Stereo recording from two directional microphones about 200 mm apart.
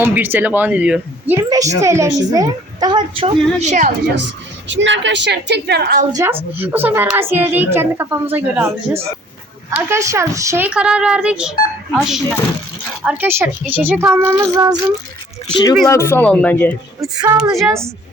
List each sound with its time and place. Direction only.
0.0 s a woman's voice: 10° right (ahead or behind); by 3.9 s 35° right (ahead or behind)
4.7 s a woman's voice: 65° right (ahead or behind)
6.1 s a woman's voice: 20° right (ahead or behind)
15.9 s speech: 15° left (ahead or behind)
17.0 s speech: 20° right (ahead or behind)
17.3 s a woman's voice: centre (ahead or behind)